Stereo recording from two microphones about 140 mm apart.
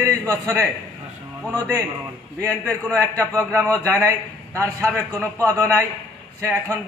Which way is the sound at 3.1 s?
20° right (ahead or behind).